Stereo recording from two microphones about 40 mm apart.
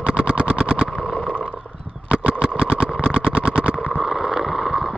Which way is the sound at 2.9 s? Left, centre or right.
Left.